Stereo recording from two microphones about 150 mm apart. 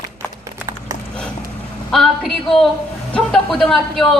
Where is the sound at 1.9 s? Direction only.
Centre (ahead or behind).